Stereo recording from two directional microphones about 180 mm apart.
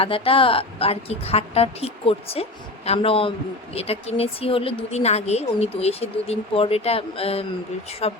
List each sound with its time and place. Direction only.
0.0 s speech: 30° left (ahead or behind)